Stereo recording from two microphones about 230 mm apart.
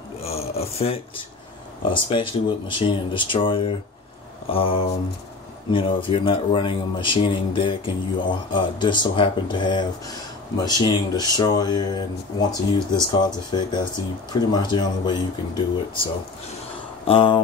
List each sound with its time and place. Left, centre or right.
0.2 s speech: left